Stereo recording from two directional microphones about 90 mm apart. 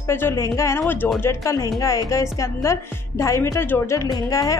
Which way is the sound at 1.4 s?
35° left (ahead or behind).